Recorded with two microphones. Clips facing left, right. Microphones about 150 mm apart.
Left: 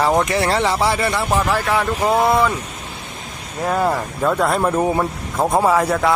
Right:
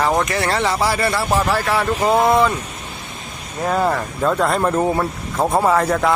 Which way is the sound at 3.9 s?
5° left (ahead or behind).